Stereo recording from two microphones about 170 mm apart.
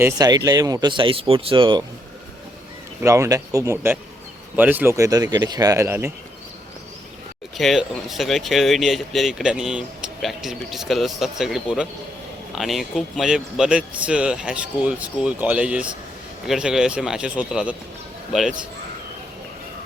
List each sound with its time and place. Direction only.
0.0 s speech: 20° right (ahead or behind)
3.0 s speech: 15° right (ahead or behind)
7.5 s speech: centre (ahead or behind)